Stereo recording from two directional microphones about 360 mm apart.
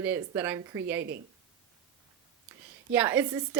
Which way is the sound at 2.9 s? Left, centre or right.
Centre.